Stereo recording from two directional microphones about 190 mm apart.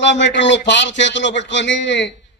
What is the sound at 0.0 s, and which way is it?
A man's voice, 70° left (ahead or behind).